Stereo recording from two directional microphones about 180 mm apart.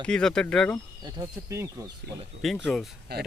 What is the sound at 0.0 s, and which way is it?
Speech, 5° left (ahead or behind).